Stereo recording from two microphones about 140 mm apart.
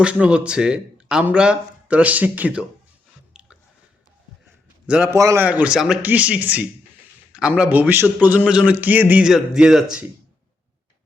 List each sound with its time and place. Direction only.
0.0 s a man's voice: 5° right (ahead or behind)
3.3 s chewing: 5° right (ahead or behind)
4.9 s a man's voice: 10° right (ahead or behind)
5.1 s a man's voice: 20° right (ahead or behind)
5.5 s a man's voice: 10° right (ahead or behind)